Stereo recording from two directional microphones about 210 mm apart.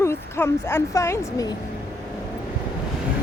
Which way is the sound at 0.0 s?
10° left (ahead or behind).